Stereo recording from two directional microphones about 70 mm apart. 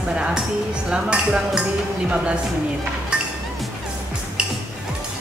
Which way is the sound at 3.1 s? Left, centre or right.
Centre.